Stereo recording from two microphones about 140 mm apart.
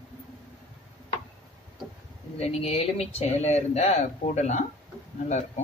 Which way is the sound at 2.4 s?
50° left (ahead or behind).